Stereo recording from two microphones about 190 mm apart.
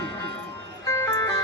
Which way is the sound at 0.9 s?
15° left (ahead or behind).